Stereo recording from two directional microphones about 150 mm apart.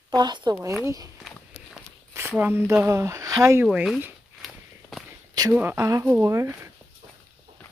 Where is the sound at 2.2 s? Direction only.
15° right (ahead or behind).